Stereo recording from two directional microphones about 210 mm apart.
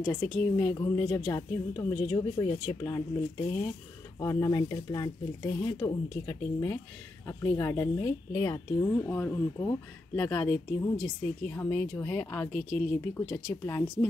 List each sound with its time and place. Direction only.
0.0 s speech: 10° left (ahead or behind)
4.2 s speech: 15° left (ahead or behind)